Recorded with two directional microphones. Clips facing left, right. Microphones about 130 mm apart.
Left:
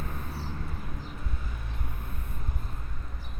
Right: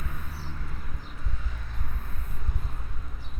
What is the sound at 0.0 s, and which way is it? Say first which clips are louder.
Vehicle: left 3 dB; 35° left (ahead or behind).